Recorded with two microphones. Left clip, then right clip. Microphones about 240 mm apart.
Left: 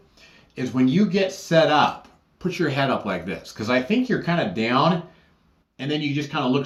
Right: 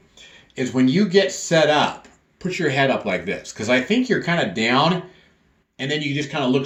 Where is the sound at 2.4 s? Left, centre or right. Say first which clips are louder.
Right 3 dB; centre.